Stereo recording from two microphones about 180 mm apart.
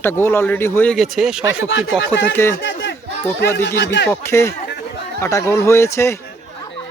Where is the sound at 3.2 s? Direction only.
10° left (ahead or behind).